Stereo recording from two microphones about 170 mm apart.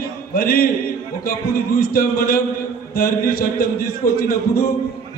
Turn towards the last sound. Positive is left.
turn(degrees=65)  # may be behind; listen again after turning